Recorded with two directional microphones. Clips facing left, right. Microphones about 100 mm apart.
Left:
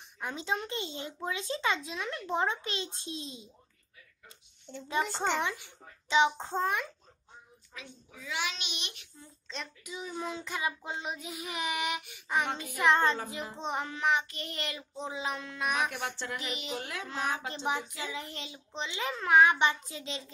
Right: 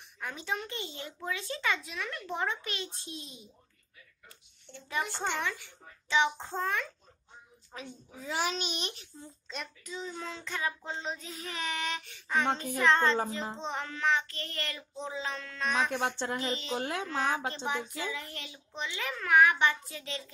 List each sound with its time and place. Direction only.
0.2 s a child's voice: 20° left (ahead or behind)
4.8 s a child's voice: 20° left (ahead or behind)
7.7 s a child's voice: 40° right (ahead or behind)
9.5 s a child's voice: 5° right (ahead or behind)
9.8 s child singing: 10° left (ahead or behind)
15.9 s speech: 20° right (ahead or behind)
17.9 s a child's voice: 20° left (ahead or behind)